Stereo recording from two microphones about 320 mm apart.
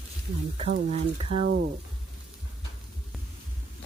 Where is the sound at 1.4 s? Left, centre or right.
Right.